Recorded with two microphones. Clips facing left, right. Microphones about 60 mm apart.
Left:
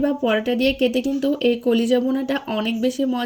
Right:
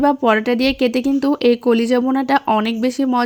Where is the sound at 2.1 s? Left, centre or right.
Right.